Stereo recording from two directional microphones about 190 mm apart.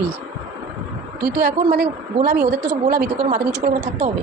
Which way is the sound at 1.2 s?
55° right (ahead or behind).